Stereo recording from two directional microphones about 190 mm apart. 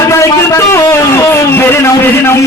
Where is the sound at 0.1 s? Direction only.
15° left (ahead or behind).